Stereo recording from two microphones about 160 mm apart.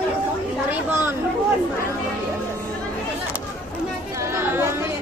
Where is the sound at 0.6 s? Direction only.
15° right (ahead or behind).